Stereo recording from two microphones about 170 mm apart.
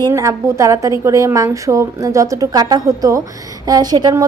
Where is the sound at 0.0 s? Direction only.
20° right (ahead or behind).